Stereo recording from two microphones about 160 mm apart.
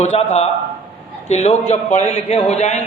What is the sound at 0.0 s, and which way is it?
A man's voice, 45° left (ahead or behind).